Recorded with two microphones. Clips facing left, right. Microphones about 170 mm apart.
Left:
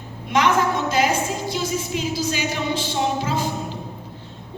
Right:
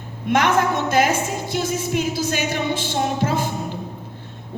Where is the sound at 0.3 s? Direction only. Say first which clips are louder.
Right 1 dB; 50° right (ahead or behind).